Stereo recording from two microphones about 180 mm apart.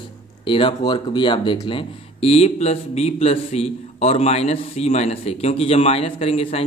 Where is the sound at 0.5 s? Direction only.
30° left (ahead or behind).